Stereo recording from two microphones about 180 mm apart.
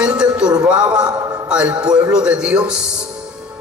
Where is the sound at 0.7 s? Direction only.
5° right (ahead or behind).